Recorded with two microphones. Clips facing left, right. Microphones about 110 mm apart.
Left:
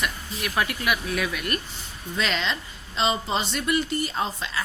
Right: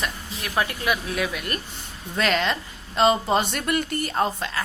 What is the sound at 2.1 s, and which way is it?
A woman's voice, 50° right (ahead or behind).